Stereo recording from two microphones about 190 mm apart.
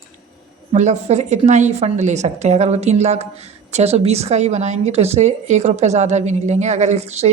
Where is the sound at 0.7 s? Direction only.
35° right (ahead or behind).